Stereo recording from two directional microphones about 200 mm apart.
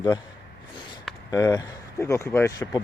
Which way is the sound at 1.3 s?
15° left (ahead or behind).